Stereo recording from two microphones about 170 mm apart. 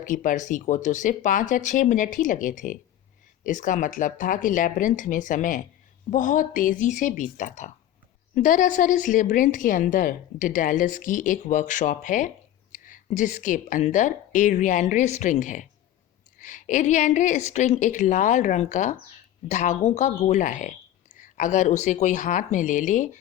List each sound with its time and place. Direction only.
0.0 s a woman's voice: 50° left (ahead or behind)